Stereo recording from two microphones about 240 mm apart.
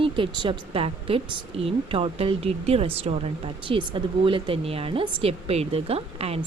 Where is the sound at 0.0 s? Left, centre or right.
Right.